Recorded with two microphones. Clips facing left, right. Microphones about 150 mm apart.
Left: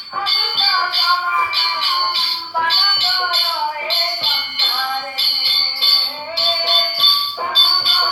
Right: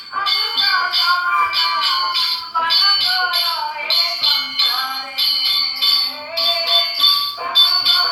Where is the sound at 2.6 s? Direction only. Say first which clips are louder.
Left 2 dB; 35° left (ahead or behind).